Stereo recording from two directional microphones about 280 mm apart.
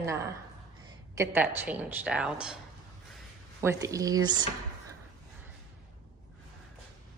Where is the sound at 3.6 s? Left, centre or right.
Centre.